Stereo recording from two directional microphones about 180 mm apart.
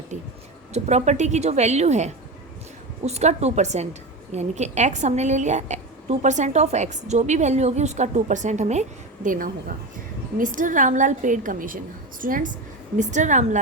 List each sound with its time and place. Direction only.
0.1 s a woman's voice: 40° right (ahead or behind)